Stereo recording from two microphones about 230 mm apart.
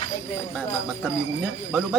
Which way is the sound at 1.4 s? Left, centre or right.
Centre.